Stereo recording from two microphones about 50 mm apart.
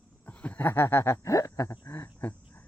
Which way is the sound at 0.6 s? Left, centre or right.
Left.